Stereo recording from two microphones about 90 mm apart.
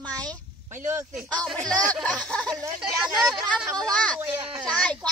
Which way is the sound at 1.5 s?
5° left (ahead or behind).